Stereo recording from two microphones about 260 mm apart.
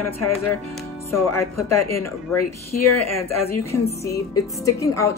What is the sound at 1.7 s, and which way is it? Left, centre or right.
Speech, left.